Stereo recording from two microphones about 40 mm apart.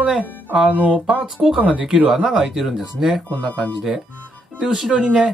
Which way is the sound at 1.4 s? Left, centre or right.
Centre.